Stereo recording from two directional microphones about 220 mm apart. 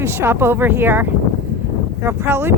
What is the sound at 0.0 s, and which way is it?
A woman's voice, 10° right (ahead or behind).